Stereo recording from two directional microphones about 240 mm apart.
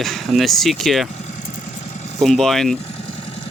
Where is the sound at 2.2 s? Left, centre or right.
Centre.